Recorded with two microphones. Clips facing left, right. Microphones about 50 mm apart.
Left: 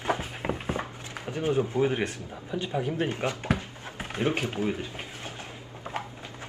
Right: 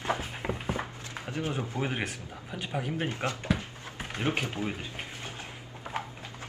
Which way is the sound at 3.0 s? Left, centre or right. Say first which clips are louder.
Left 2 dB; left.